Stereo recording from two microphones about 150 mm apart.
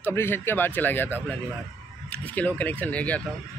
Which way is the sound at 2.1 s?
10° left (ahead or behind).